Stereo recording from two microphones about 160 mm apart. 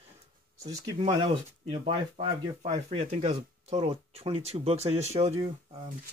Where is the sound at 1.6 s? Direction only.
40° right (ahead or behind).